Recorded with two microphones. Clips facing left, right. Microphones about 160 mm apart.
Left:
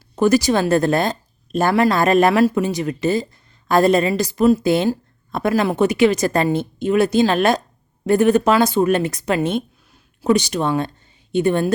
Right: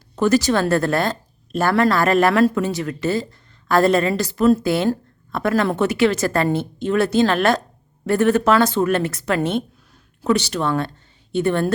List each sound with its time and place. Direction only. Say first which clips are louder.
0.2 s a woman's voice: left 1 dB; 15° left (ahead or behind)